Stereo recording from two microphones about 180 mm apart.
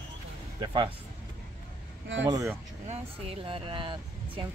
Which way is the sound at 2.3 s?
15° right (ahead or behind).